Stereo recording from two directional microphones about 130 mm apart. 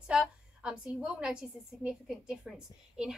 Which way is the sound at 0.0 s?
10° right (ahead or behind).